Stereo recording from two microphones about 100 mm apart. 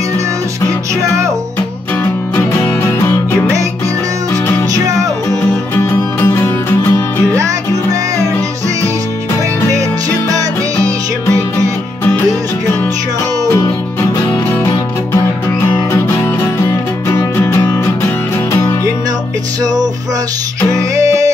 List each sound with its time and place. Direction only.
2.3 s music: 25° left (ahead or behind)
5.3 s music: 25° left (ahead or behind)
7.3 s music: 35° right (ahead or behind)
15.6 s music: 25° left (ahead or behind)
19.6 s music: 40° right (ahead or behind)